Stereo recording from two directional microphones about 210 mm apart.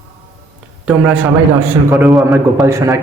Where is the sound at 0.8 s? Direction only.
5° right (ahead or behind).